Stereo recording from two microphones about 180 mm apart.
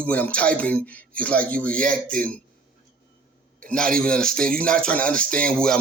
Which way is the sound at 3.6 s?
5° left (ahead or behind).